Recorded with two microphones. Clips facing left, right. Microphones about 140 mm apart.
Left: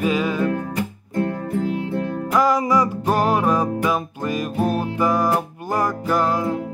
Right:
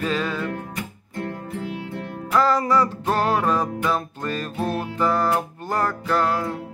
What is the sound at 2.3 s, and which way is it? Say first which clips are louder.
Music: left 1 dB; 10° left (ahead or behind).